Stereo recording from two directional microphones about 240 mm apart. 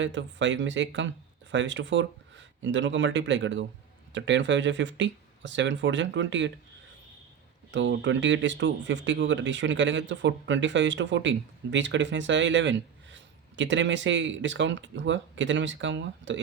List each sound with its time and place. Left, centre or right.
0.0 s speech: right
7.7 s speech: right